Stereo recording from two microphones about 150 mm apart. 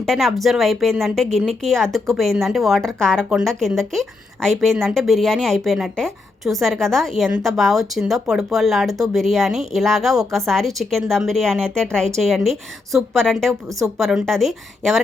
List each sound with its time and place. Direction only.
0.0 s a woman's voice: centre (ahead or behind)
13.5 s speech: 20° right (ahead or behind)
13.8 s a woman's voice: 5° right (ahead or behind)